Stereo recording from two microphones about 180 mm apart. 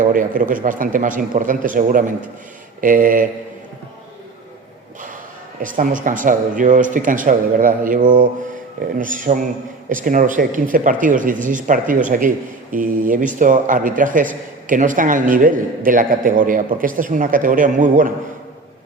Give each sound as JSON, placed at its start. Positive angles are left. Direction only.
{"t": 0.0, "sound": "a man's voice", "side_deg": -50}
{"t": 5.6, "sound": "a man's voice", "side_deg": -50}